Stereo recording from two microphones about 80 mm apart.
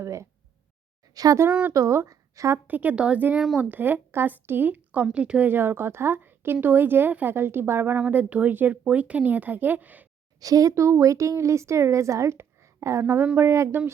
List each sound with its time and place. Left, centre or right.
0.0 s a sound: right
1.1 s speech: right
1.5 s speech: centre
1.7 s speech: right
2.6 s a woman's voice: right
3.3 s speech: centre
3.6 s a woman's voice: right
5.5 s a woman's voice: right
10.4 s a woman's voice: right